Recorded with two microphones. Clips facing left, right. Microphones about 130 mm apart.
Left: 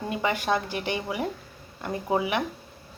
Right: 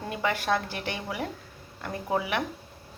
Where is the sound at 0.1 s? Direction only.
10° left (ahead or behind).